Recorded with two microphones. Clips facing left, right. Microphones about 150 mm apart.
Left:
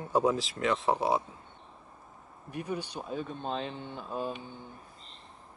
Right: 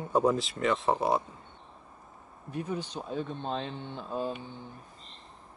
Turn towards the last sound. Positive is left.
turn(degrees=10)  # may be behind; listen again after turning